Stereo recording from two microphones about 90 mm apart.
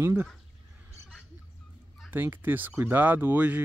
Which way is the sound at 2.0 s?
25° right (ahead or behind).